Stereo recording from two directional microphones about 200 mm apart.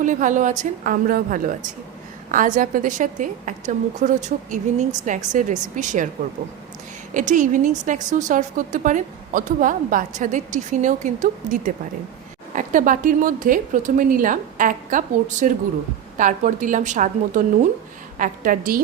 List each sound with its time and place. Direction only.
0.0 s a woman's voice: 40° right (ahead or behind)
7.1 s a woman's voice: 40° right (ahead or behind)